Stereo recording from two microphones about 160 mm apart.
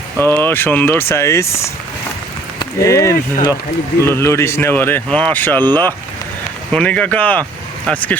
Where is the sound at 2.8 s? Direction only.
20° left (ahead or behind).